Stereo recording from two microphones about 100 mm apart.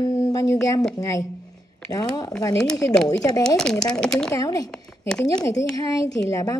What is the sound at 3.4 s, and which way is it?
Speech, 5° left (ahead or behind).